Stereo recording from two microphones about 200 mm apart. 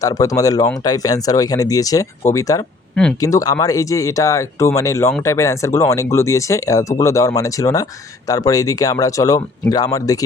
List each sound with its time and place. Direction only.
0.0 s speech: 15° left (ahead or behind)
2.9 s speech: 5° left (ahead or behind)
3.2 s speech: 15° left (ahead or behind)